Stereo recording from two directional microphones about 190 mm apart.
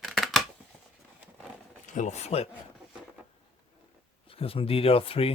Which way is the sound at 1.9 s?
40° left (ahead or behind).